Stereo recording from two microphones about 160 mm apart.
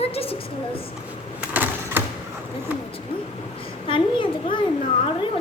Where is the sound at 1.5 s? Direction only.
10° right (ahead or behind).